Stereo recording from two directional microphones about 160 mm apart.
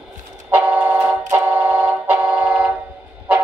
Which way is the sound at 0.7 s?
10° right (ahead or behind).